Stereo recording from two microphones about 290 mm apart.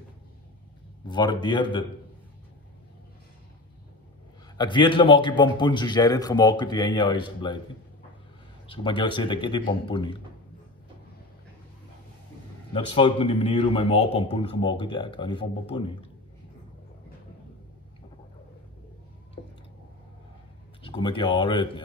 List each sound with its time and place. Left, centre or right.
1.0 s speech: centre
4.6 s speech: centre
8.6 s speech: centre
12.7 s speech: centre
20.8 s speech: centre